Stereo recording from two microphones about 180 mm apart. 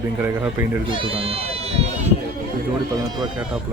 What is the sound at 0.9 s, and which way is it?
Speech, 30° right (ahead or behind).